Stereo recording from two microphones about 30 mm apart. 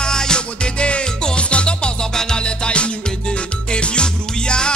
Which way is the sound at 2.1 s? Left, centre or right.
Centre.